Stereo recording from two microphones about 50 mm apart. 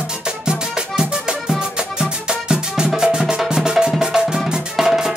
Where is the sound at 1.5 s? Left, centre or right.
Centre.